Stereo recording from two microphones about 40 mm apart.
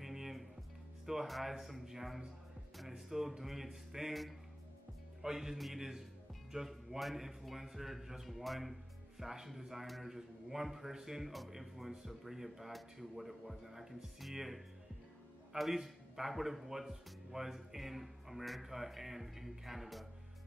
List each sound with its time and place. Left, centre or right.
0.0 s music: centre
1.0 s a man's voice: centre